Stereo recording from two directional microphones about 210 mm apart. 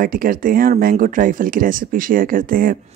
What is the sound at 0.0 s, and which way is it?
Speech, 40° right (ahead or behind).